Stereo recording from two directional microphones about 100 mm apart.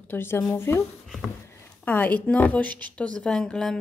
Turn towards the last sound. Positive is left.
turn(degrees=5)  # may be behind; listen again after turning